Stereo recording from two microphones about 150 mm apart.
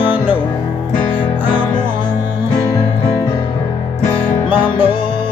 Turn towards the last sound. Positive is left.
turn(degrees=35)  # may be behind; listen again after turning